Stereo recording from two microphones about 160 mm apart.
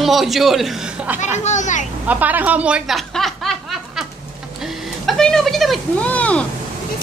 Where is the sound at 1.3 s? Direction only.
45° left (ahead or behind).